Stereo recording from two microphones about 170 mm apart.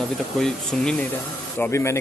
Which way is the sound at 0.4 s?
5° left (ahead or behind).